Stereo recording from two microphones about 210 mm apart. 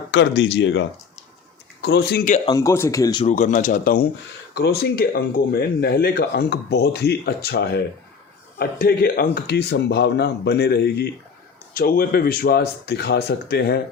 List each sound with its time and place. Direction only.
0.1 s speech: 55° left (ahead or behind)
2.5 s speech: 15° left (ahead or behind)
3.2 s speech: 35° left (ahead or behind)